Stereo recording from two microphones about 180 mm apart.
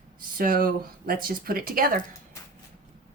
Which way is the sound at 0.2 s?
50° right (ahead or behind).